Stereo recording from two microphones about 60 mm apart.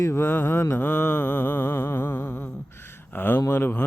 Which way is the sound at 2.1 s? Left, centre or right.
Left.